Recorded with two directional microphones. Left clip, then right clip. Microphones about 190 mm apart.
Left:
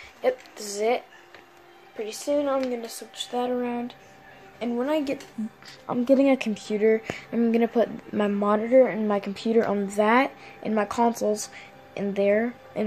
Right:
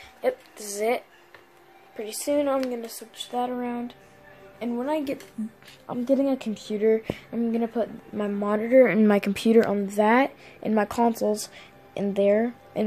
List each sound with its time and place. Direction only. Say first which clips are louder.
0.2 s speech: left 1 dB; centre (ahead or behind)
2.2 s speech: right 1 dB; 25° right (ahead or behind)
2.7 s speech: left 1 dB; 5° right (ahead or behind)
5.9 s speech: left 4 dB; 10° left (ahead or behind)
7.3 s speech: left 5 dB; 15° left (ahead or behind)
8.8 s speech: right 4 dB; 30° right (ahead or behind)
9.7 s a woman's voice: even; 10° right (ahead or behind)